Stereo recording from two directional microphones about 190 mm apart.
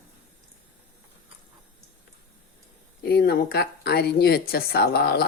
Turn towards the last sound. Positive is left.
turn(degrees=55)  # may be behind; listen again after turning